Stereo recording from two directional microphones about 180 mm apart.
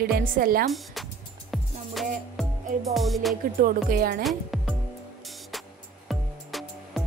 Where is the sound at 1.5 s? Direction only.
Centre (ahead or behind).